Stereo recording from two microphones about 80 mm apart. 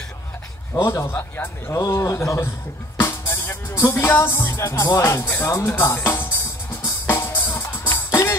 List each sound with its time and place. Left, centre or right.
0.7 s speech: left
3.0 s music: left
4.1 s speech: left
6.8 s music: left